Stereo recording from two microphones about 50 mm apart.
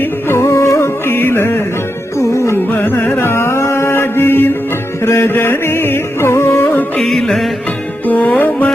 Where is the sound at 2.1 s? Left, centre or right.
Left.